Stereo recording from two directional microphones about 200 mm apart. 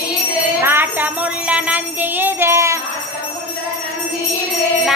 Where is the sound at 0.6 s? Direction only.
10° right (ahead or behind).